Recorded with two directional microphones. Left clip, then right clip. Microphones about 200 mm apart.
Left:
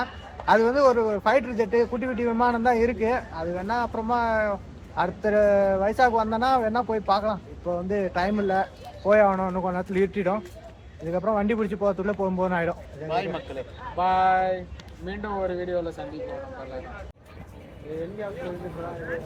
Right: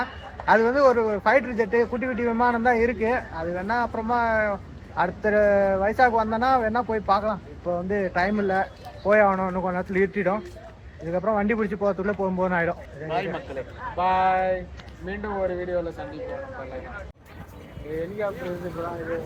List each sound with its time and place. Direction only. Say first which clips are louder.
0.0 s a man's voice: right 1 dB; 5° left (ahead or behind)
13.1 s a man's voice: even; 15° left (ahead or behind)